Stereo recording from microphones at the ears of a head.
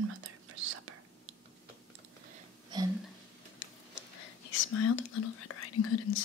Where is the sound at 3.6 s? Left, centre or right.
Left.